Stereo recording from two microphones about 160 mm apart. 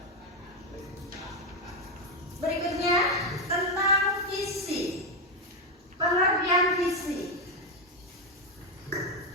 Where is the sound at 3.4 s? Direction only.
20° right (ahead or behind).